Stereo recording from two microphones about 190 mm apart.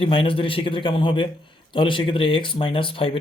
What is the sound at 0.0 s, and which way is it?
A man's voice, 30° left (ahead or behind).